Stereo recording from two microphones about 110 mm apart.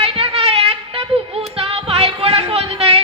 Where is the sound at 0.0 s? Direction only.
60° right (ahead or behind).